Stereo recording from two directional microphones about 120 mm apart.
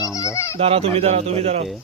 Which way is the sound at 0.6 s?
55° right (ahead or behind).